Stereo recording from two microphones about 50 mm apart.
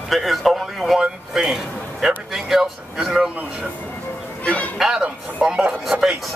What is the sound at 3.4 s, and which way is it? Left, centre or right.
Speech, right.